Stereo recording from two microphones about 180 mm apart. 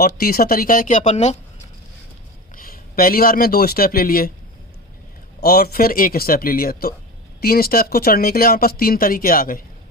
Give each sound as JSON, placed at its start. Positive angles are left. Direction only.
{"t": 0.0, "sound": "speech", "side_deg": 55}
{"t": 2.6, "sound": "speech", "side_deg": 50}
{"t": 5.4, "sound": "speech", "side_deg": 60}